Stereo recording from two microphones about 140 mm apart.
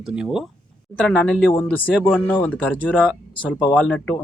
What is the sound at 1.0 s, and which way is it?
A man's voice, 5° left (ahead or behind).